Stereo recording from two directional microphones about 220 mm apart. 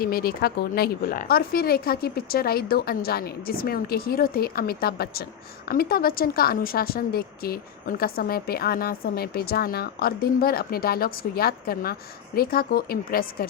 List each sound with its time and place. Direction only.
0.0 s a woman's voice: 45° left (ahead or behind)